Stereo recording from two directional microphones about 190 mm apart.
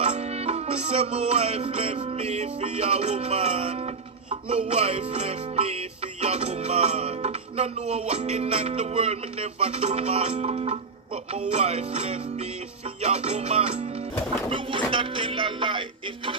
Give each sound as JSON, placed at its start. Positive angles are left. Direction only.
{"t": 0.0, "sound": "music", "side_deg": -35}